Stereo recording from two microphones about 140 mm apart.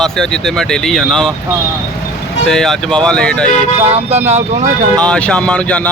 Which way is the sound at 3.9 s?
50° right (ahead or behind).